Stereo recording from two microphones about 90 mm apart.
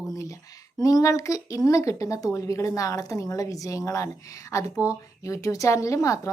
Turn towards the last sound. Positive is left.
turn(degrees=35)  # may be behind; listen again after turning